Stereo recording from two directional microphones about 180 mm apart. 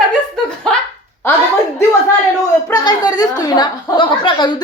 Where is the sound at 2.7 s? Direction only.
20° left (ahead or behind).